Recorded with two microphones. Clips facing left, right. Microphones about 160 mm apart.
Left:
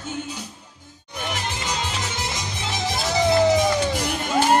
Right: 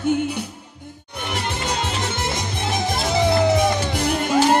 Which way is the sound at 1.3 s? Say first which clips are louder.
Right 4 dB; 55° right (ahead or behind).